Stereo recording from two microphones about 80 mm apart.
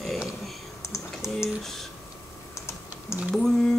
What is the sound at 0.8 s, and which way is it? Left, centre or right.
Typing, left.